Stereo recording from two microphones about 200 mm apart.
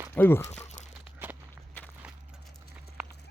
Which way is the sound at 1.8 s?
10° left (ahead or behind).